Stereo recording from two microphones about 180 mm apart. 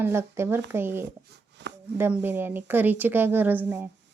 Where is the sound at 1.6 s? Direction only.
75° right (ahead or behind).